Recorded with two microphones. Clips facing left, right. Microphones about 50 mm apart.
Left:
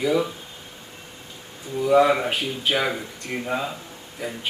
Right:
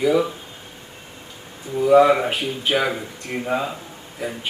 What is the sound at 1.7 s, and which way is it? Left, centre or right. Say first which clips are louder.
A man's voice: right 4 dB; centre.